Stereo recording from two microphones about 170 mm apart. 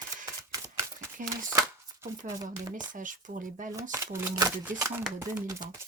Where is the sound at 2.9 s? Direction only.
50° right (ahead or behind).